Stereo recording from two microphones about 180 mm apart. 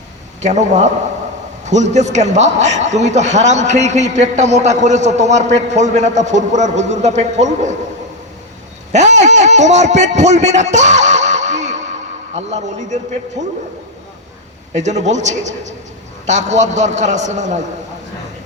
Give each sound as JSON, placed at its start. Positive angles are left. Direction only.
{"t": 0.4, "sound": "a man's voice", "side_deg": -40}
{"t": 8.9, "sound": "a man's voice", "side_deg": -40}
{"t": 14.7, "sound": "a man's voice", "side_deg": -40}